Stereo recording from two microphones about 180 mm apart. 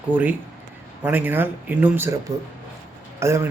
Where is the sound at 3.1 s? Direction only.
15° right (ahead or behind).